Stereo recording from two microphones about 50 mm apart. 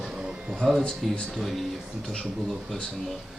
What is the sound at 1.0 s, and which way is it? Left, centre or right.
Speech, centre.